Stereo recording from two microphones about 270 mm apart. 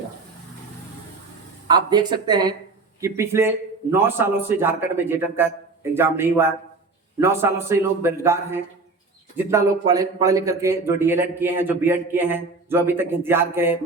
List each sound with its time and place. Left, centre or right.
1.6 s speech: centre